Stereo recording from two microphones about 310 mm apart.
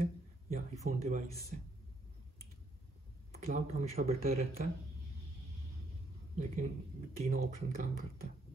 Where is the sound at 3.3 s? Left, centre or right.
Right.